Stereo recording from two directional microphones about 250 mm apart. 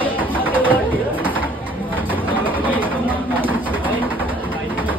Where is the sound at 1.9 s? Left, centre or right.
Centre.